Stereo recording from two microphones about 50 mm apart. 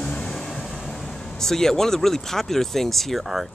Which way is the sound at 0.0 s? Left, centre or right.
Left.